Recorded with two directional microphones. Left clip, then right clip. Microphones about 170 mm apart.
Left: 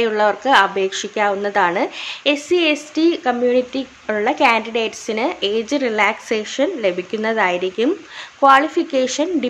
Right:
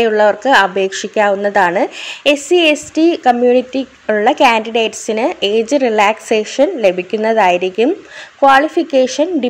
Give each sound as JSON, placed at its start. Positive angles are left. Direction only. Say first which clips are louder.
{"t": 0.0, "sound": "a woman's voice", "louder": "right 5 dB", "side_deg": -20}